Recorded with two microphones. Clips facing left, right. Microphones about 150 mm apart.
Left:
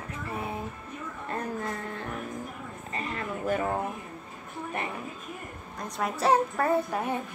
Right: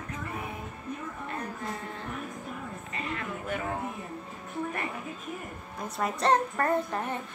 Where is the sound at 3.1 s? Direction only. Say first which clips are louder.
Left 7 dB; 40° left (ahead or behind).